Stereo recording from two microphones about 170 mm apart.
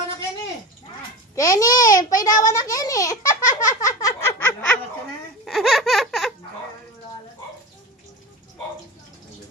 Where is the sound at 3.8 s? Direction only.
15° left (ahead or behind).